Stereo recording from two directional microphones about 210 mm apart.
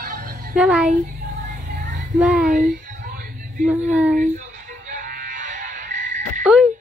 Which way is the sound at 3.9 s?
5° right (ahead or behind).